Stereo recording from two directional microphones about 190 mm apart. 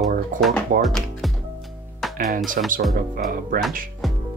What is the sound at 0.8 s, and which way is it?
Music, centre (ahead or behind).